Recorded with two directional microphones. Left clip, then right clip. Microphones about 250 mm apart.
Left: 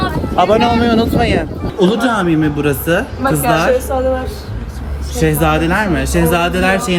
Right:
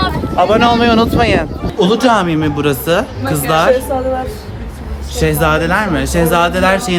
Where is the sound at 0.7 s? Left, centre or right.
Centre.